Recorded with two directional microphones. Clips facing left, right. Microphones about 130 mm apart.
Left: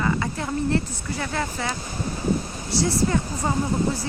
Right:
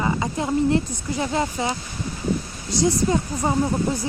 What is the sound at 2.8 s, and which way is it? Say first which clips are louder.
Speech: right 3 dB; 20° right (ahead or behind).